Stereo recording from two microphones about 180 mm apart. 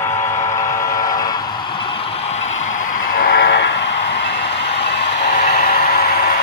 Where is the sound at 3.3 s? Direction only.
80° left.